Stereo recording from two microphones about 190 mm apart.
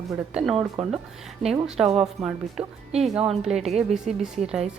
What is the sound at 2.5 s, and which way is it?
Speech, 35° right (ahead or behind).